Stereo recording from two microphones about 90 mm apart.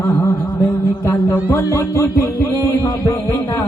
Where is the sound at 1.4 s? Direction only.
25° left (ahead or behind).